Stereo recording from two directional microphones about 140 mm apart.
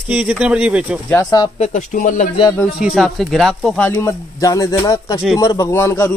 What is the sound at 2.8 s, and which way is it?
Speech, centre (ahead or behind).